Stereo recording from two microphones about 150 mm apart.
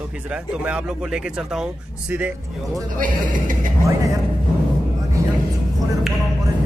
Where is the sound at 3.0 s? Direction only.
60° right (ahead or behind).